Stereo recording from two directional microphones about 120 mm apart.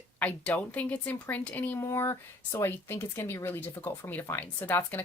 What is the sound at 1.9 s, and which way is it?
Speech, 25° left (ahead or behind).